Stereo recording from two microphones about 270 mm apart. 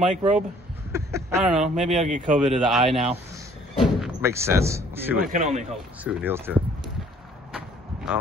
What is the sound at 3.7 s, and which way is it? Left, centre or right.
Slam, centre.